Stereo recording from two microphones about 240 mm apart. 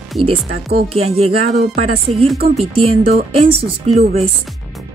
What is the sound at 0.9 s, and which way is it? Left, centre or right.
Speech, right.